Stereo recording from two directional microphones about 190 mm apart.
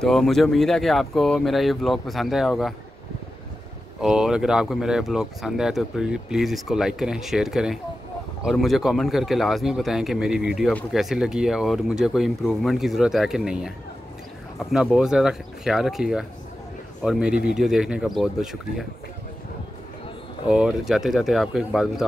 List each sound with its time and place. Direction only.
0.0 s speech: centre (ahead or behind)
4.0 s speech: 5° right (ahead or behind)
20.4 s speech: 5° right (ahead or behind)